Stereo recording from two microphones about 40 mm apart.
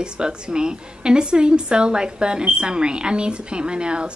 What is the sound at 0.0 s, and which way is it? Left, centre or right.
A woman's voice, right.